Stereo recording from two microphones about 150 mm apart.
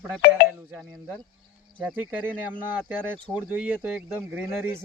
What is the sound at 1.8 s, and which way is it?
Speech, 10° right (ahead or behind).